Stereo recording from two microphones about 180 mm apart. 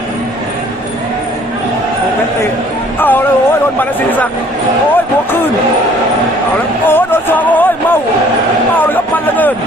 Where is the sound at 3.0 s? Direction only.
10° left (ahead or behind).